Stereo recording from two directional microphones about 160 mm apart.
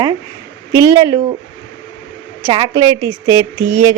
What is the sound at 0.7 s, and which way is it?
Speech, 20° right (ahead or behind).